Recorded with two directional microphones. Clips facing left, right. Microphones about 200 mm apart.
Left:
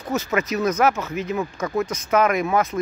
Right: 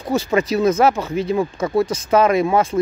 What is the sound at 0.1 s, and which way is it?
Speech, 30° right (ahead or behind).